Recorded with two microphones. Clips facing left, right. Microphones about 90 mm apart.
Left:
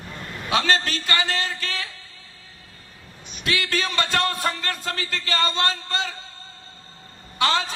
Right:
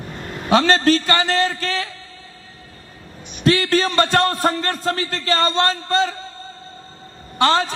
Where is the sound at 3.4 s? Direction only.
35° right (ahead or behind).